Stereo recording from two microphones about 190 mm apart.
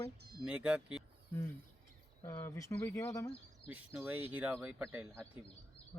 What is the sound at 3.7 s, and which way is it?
Speech, 10° right (ahead or behind).